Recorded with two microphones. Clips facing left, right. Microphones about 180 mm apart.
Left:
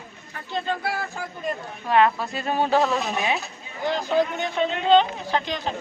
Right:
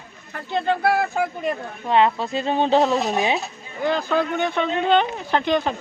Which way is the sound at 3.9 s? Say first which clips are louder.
Right 1 dB; 55° right (ahead or behind).